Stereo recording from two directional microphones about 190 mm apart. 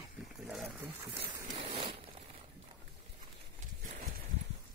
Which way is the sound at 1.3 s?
25° right (ahead or behind).